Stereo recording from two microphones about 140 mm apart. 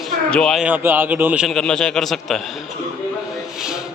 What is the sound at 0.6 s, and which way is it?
A man's voice, 15° right (ahead or behind).